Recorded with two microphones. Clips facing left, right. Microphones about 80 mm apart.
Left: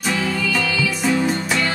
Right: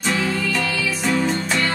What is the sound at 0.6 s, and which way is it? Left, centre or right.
Music, right.